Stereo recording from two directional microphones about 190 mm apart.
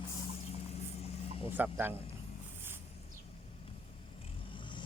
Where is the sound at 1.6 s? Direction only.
10° right (ahead or behind).